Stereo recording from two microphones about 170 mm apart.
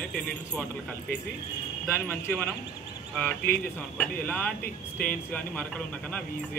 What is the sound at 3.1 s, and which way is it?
Speech, 5° left (ahead or behind).